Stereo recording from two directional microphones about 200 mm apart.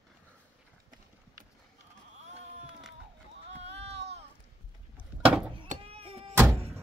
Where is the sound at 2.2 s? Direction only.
35° right (ahead or behind).